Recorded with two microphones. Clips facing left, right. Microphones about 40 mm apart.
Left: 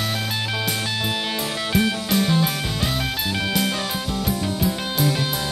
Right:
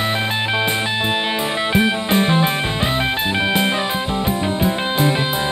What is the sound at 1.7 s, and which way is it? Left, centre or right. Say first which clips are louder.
Music: right 3 dB; right.